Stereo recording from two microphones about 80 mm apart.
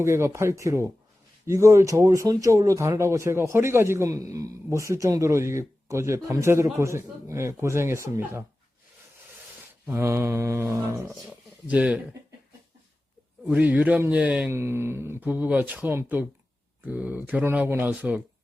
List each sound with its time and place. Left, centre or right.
0.0 s speech: right
9.8 s speech: right
11.3 s a sound: centre
13.5 s speech: centre
14.5 s speech: right